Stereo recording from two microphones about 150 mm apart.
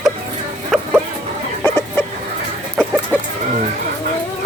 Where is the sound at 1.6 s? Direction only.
15° left (ahead or behind).